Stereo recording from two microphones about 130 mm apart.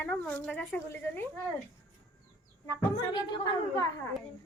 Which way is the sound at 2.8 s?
35° left (ahead or behind).